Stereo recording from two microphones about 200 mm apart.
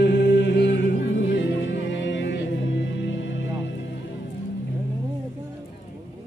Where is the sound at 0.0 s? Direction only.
60° left (ahead or behind).